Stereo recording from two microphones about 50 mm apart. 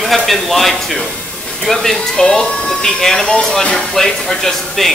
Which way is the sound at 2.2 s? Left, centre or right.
Left.